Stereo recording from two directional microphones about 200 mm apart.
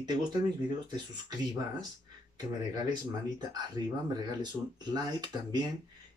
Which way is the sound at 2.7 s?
20° right (ahead or behind).